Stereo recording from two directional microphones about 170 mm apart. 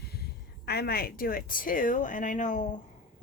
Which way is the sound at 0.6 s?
70° left (ahead or behind).